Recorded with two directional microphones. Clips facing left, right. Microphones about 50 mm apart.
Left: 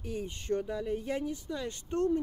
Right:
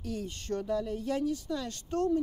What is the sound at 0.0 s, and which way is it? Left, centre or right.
Speech, centre.